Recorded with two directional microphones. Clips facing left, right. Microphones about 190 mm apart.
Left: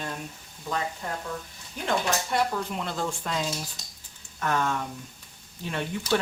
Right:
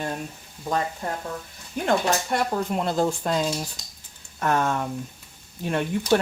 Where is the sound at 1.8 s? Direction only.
50° right (ahead or behind).